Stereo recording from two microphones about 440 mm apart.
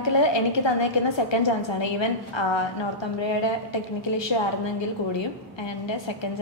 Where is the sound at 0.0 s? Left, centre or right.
Left.